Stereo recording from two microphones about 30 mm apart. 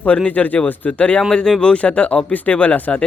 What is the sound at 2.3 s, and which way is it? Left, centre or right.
Speech, left.